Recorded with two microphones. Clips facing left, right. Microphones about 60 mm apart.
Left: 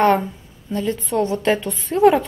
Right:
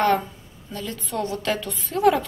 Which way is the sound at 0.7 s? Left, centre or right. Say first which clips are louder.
Left 8 dB; left.